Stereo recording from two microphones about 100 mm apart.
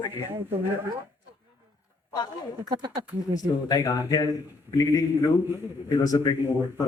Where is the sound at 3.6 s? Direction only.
40° left (ahead or behind).